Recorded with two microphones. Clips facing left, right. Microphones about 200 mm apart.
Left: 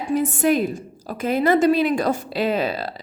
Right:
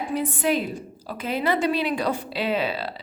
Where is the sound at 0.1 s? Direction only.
45° left (ahead or behind).